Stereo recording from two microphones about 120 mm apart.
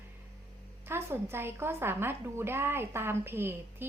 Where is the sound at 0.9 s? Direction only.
20° right (ahead or behind).